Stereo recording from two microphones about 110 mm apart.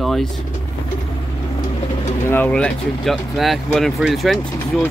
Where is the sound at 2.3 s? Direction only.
15° left (ahead or behind).